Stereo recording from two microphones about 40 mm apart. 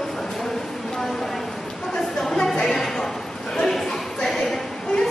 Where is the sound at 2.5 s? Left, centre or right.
Centre.